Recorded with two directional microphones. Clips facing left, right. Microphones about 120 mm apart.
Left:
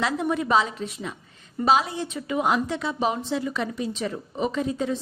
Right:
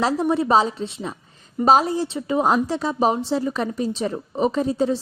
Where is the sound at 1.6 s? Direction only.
40° right (ahead or behind).